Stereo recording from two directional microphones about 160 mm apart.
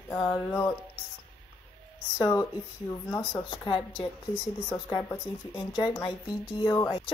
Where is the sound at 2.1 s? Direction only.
25° left (ahead or behind).